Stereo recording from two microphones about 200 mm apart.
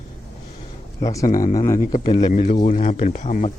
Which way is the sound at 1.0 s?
15° left (ahead or behind).